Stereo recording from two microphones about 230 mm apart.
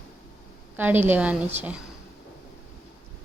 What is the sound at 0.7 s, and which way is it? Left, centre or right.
A woman's voice, centre.